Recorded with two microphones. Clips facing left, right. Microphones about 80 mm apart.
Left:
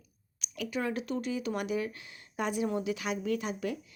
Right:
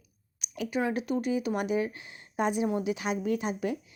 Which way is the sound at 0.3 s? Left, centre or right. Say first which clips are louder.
Right 4 dB; right.